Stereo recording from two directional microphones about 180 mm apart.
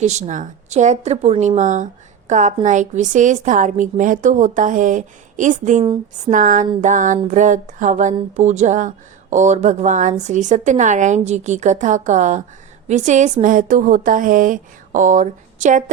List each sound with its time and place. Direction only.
0.0 s a woman's voice: 40° right (ahead or behind)
5.8 s a sound: 25° right (ahead or behind)
6.3 s a woman's voice: 45° right (ahead or behind)